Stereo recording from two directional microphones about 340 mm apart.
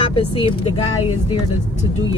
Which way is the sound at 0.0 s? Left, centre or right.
Centre.